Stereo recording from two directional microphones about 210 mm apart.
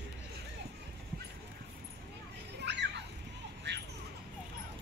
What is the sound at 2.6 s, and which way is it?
Children playing, 55° right (ahead or behind).